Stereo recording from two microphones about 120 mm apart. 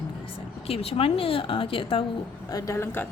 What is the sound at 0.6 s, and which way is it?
A woman's voice, 55° left (ahead or behind).